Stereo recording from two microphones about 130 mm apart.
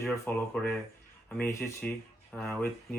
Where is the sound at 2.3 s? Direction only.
5° left (ahead or behind).